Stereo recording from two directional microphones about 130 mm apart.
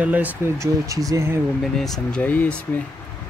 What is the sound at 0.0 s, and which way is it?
Speech, 10° right (ahead or behind).